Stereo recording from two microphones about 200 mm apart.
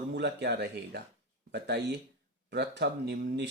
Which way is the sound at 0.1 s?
60° right (ahead or behind).